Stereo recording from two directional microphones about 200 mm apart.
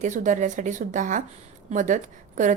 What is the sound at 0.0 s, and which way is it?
A woman's voice, 40° right (ahead or behind).